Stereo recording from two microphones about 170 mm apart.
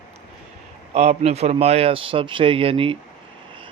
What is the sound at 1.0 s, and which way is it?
A man's voice, 40° right (ahead or behind).